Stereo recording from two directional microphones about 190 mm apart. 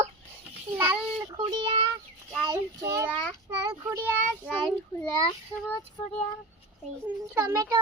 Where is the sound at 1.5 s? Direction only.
25° right (ahead or behind).